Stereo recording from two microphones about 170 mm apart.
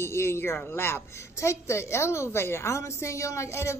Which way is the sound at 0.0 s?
15° left (ahead or behind).